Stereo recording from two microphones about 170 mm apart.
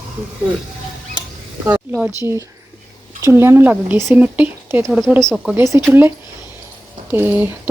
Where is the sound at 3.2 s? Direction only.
15° right (ahead or behind).